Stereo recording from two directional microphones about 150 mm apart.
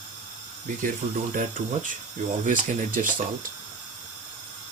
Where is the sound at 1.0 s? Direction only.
50° right (ahead or behind).